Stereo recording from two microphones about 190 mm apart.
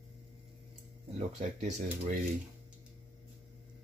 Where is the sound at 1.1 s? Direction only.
35° right (ahead or behind).